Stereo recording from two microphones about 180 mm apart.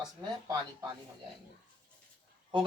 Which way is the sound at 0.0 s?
20° right (ahead or behind).